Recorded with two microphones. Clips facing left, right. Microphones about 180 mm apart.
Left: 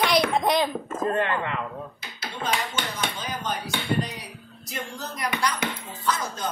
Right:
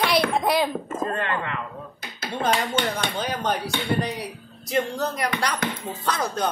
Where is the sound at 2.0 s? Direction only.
50° right (ahead or behind).